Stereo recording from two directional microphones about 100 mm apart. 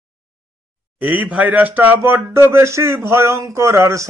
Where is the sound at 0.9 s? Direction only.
15° right (ahead or behind).